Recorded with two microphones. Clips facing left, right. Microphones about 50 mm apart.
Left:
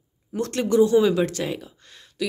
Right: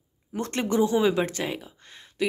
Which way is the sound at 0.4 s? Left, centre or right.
Right.